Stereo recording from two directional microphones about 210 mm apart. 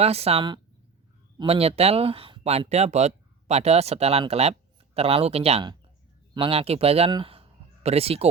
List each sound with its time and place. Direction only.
0.0 s speech: 30° right (ahead or behind)